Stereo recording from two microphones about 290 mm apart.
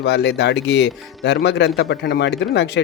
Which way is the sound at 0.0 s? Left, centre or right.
Left.